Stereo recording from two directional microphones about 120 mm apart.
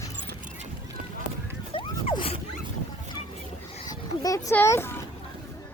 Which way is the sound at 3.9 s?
30° left (ahead or behind).